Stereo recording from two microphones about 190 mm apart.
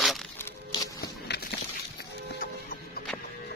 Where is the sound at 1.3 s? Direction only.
60° left (ahead or behind).